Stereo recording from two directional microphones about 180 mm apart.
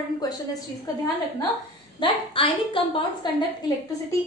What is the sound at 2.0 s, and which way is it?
A woman's voice, 30° left (ahead or behind).